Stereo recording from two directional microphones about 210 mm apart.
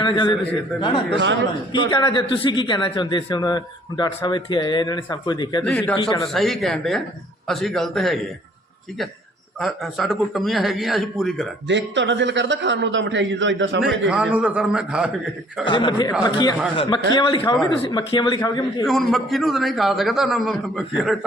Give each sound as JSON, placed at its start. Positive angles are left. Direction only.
{"t": 0.0, "sound": "a man's voice", "side_deg": 20}
{"t": 1.2, "sound": "a man's voice", "side_deg": -60}
{"t": 1.9, "sound": "a man's voice", "side_deg": 20}
{"t": 5.6, "sound": "a man's voice", "side_deg": 5}
{"t": 6.0, "sound": "a man's voice", "side_deg": 20}
{"t": 6.2, "sound": "a man's voice", "side_deg": 0}
{"t": 9.6, "sound": "a man's voice", "side_deg": 0}
{"t": 11.7, "sound": "a man's voice", "side_deg": -60}
{"t": 14.1, "sound": "a man's voice", "side_deg": -5}
{"t": 15.6, "sound": "a man's voice", "side_deg": 20}
{"t": 18.9, "sound": "a man's voice", "side_deg": 0}